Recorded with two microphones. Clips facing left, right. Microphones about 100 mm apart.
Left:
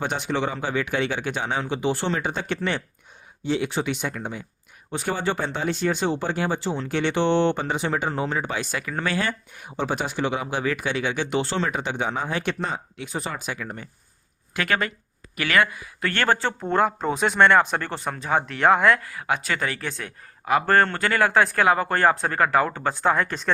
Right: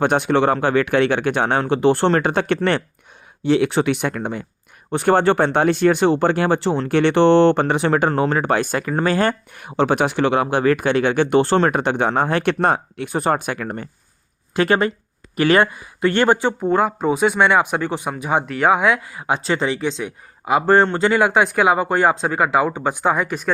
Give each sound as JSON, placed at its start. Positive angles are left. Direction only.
{"t": 0.0, "sound": "speech", "side_deg": -60}
{"t": 14.5, "sound": "speech", "side_deg": -30}
{"t": 18.4, "sound": "speech", "side_deg": -5}